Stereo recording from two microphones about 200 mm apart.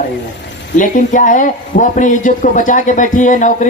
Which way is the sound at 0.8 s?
40° left (ahead or behind).